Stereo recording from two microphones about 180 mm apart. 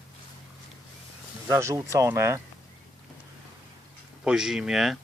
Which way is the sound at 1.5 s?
15° right (ahead or behind).